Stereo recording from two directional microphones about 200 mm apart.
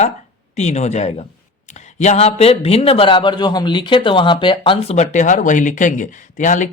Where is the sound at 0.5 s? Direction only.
35° left (ahead or behind).